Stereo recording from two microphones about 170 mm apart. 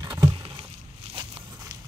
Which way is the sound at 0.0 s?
25° right (ahead or behind).